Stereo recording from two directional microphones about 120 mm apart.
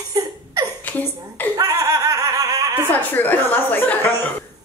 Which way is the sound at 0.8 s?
15° left (ahead or behind).